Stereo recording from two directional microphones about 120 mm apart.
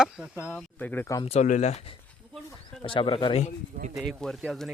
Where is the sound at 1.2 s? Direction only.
65° left (ahead or behind).